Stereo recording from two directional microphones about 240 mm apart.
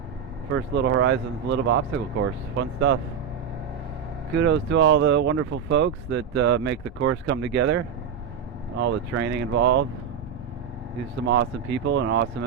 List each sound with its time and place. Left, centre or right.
0.5 s speech: right
4.4 s speech: right
8.8 s speech: right
11.3 s speech: right